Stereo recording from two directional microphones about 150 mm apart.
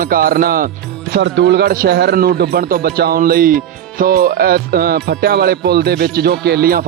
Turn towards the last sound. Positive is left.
turn(degrees=-90)